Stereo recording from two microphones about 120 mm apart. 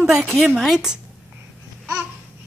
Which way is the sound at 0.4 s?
5° right (ahead or behind).